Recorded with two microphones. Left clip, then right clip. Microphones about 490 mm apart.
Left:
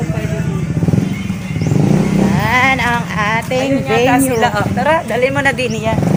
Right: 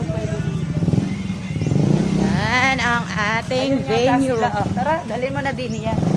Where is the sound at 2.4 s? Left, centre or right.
Right.